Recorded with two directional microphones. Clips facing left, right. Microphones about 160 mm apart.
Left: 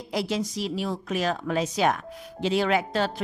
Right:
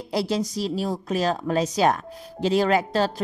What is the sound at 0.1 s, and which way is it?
A woman's voice, 35° right (ahead or behind).